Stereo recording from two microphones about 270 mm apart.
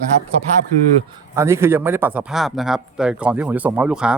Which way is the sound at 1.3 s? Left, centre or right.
Centre.